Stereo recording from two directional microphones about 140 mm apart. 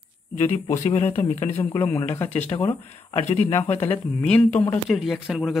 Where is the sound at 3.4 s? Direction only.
15° left (ahead or behind).